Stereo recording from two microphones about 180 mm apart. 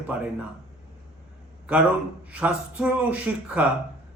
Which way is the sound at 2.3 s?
5° right (ahead or behind).